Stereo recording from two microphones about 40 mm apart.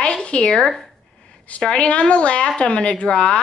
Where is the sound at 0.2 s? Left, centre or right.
Left.